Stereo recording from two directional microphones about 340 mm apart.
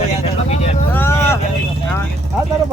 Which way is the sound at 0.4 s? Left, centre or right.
Centre.